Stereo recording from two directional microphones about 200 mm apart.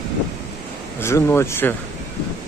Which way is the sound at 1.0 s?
15° left (ahead or behind).